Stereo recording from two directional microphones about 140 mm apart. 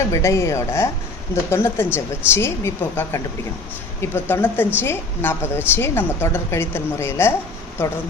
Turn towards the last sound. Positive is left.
turn(degrees=15)  # may be behind; listen again after turning